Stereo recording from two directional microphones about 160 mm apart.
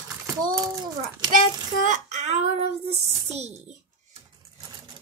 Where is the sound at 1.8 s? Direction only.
50° right (ahead or behind).